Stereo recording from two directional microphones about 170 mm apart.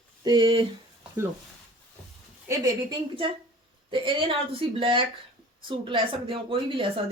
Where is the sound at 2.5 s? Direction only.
25° right (ahead or behind).